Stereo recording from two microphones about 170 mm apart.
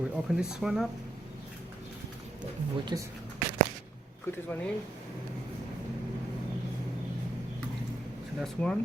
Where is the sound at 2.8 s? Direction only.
20° right (ahead or behind).